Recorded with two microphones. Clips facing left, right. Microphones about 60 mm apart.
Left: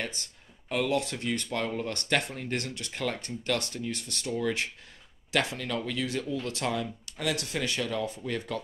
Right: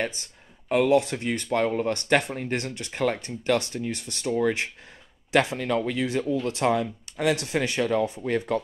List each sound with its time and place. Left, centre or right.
0.7 s speech: right